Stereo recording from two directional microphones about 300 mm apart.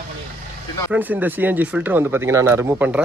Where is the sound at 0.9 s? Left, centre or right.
Centre.